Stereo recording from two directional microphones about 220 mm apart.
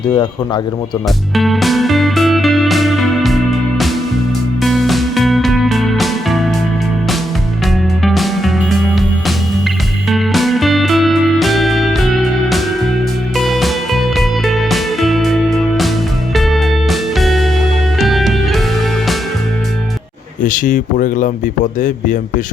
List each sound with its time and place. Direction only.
1.4 s music: centre (ahead or behind)
8.0 s music: centre (ahead or behind)
20.4 s speech: 35° left (ahead or behind)